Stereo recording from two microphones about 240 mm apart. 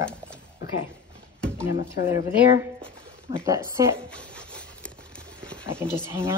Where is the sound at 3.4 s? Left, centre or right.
Centre.